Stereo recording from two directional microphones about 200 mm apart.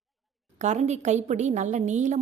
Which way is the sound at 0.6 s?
35° right (ahead or behind).